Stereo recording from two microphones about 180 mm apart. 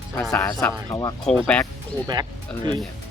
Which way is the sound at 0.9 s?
20° left (ahead or behind).